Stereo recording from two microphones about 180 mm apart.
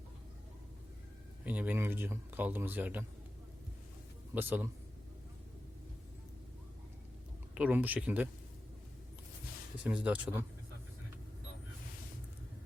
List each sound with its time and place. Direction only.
1.5 s speech: 10° right (ahead or behind)
4.4 s speech: 10° right (ahead or behind)
7.5 s speech: 10° right (ahead or behind)
9.8 s speech: 10° right (ahead or behind)